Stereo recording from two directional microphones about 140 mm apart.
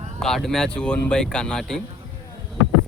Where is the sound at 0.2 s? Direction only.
5° left (ahead or behind).